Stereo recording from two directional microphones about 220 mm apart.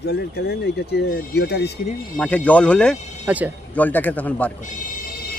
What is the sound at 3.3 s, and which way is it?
Speech, 5° right (ahead or behind).